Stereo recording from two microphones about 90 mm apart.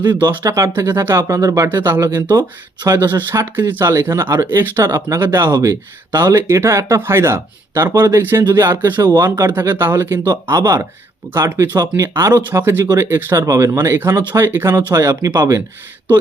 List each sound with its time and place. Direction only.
0.0 s speech: 55° right (ahead or behind)
0.4 s speech: 35° right (ahead or behind)
3.1 s speech: 25° right (ahead or behind)
4.8 s speech: 35° right (ahead or behind)
5.4 s speech: 50° right (ahead or behind)
6.3 s speech: 30° right (ahead or behind)
10.2 s speech: 40° right (ahead or behind)
11.3 s speech: 30° right (ahead or behind)
15.0 s speech: 35° right (ahead or behind)